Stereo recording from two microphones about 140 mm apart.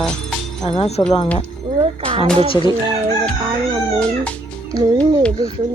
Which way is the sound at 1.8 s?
40° right (ahead or behind).